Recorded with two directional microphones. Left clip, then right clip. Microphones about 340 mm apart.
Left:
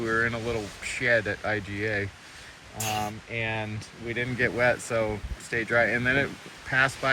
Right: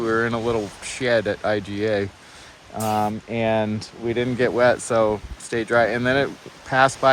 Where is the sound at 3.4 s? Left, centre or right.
Right.